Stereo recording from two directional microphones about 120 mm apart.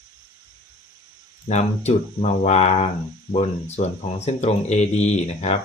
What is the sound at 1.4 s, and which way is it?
Speech, 65° left (ahead or behind).